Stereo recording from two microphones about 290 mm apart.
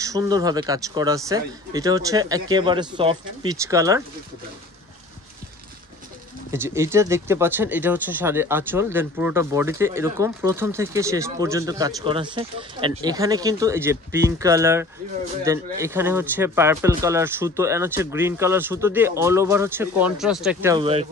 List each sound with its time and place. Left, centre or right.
0.0 s speech: centre
6.5 s speech: centre
20.7 s speech: centre